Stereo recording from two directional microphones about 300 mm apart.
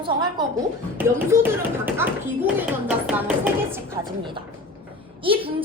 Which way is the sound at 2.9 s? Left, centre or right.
Centre.